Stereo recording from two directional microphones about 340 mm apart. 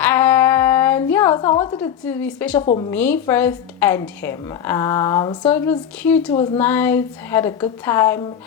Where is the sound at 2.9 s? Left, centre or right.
Centre.